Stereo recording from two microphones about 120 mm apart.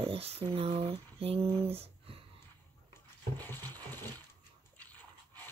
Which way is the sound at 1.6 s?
55° right (ahead or behind).